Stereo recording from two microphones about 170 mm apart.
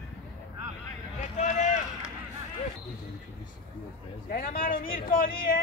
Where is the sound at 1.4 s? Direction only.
45° left (ahead or behind).